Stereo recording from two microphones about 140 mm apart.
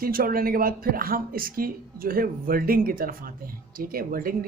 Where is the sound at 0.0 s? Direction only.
90° right.